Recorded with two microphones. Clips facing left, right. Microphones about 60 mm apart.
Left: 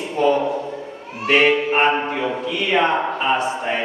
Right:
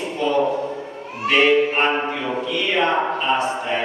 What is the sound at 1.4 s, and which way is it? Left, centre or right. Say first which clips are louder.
Speech: right 2 dB; centre.